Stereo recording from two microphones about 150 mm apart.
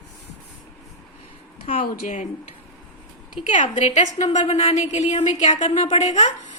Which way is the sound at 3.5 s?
50° left (ahead or behind).